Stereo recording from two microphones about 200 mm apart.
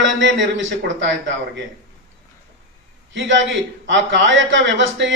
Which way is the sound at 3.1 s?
65° right (ahead or behind).